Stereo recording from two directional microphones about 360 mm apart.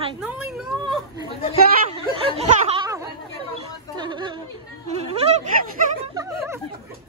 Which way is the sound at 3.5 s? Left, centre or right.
Centre.